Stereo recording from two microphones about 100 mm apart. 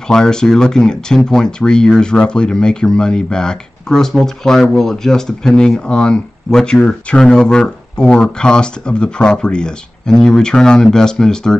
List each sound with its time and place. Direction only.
0.1 s speech: 5° left (ahead or behind)